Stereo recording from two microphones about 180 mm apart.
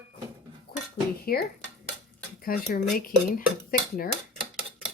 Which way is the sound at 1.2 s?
60° left (ahead or behind).